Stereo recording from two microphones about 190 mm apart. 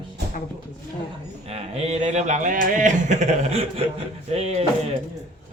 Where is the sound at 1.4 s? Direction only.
35° right (ahead or behind).